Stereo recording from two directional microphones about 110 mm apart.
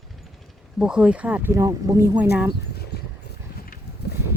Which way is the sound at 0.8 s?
10° right (ahead or behind).